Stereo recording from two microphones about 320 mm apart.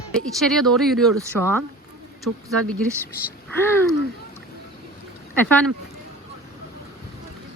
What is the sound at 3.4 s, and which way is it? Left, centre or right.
Speech, centre.